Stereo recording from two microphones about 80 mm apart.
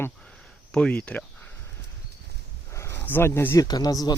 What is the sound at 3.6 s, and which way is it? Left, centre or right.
Speech, left.